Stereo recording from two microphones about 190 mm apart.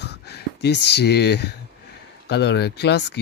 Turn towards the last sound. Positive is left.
turn(degrees=60)  # may be behind; listen again after turning